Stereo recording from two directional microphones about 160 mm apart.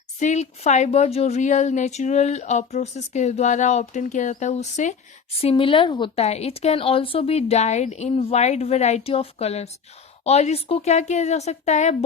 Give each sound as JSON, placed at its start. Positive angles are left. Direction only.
{"t": 0.2, "sound": "speech", "side_deg": 45}
{"t": 5.4, "sound": "speech", "side_deg": 35}
{"t": 6.2, "sound": "speech", "side_deg": 40}